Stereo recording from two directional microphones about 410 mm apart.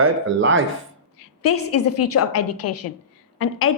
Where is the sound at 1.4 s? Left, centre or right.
Left.